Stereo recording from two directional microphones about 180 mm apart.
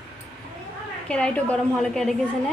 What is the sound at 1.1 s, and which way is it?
Speech, 5° left (ahead or behind).